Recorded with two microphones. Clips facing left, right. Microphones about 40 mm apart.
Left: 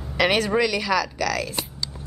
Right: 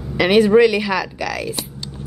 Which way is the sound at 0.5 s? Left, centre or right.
Centre.